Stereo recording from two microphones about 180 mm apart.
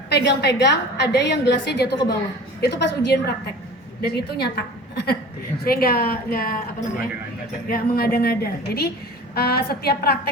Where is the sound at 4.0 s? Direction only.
65° left (ahead or behind).